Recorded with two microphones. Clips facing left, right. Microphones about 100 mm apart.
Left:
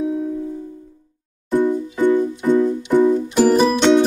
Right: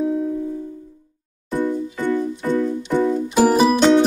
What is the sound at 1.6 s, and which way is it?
Music, 15° left (ahead or behind).